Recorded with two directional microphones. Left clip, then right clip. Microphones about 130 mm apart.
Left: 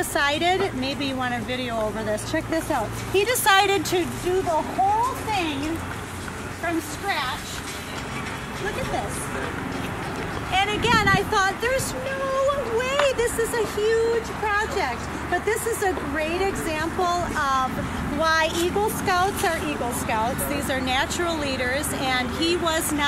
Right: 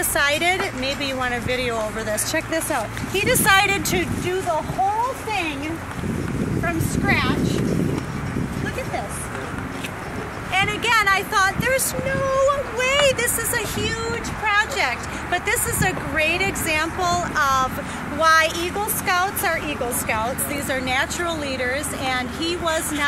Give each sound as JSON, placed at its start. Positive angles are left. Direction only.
{"t": 0.1, "sound": "speech", "side_deg": -10}
{"t": 3.2, "sound": "speech", "side_deg": 0}
{"t": 6.6, "sound": "speech", "side_deg": -5}
{"t": 10.5, "sound": "speech", "side_deg": 0}